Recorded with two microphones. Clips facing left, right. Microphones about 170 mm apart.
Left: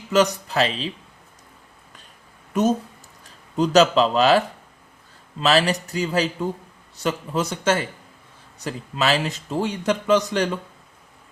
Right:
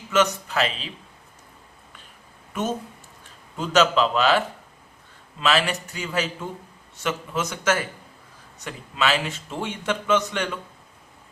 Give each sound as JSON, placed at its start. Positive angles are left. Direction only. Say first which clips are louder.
{"t": 0.1, "sound": "a man's voice", "louder": "left 3 dB", "side_deg": 35}
{"t": 2.5, "sound": "a man's voice", "louder": "left 7 dB", "side_deg": 40}